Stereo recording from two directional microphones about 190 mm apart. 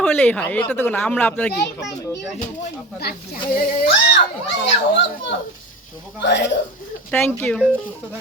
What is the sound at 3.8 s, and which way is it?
Speech, 65° left (ahead or behind).